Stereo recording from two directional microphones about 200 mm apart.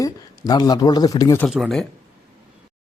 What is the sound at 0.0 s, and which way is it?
A man's voice, 20° left (ahead or behind).